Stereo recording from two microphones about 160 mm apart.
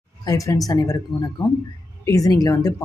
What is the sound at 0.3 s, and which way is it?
Speech, 20° left (ahead or behind).